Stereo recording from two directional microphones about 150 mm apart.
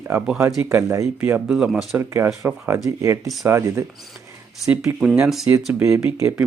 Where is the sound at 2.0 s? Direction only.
15° right (ahead or behind).